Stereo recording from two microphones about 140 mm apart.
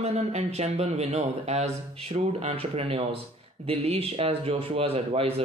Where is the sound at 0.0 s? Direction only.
50° right (ahead or behind).